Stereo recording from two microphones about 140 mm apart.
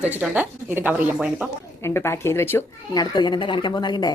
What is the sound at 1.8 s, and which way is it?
Speech, 20° left (ahead or behind).